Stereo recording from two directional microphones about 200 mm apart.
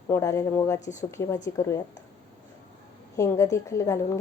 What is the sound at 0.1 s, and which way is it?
Speech, 15° left (ahead or behind).